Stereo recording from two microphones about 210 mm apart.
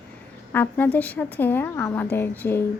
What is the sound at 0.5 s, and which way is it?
A woman's voice, 10° left (ahead or behind).